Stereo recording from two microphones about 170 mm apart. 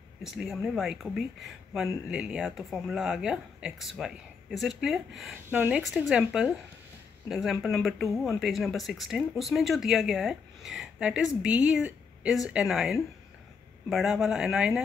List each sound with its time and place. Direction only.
0.2 s speech: centre (ahead or behind)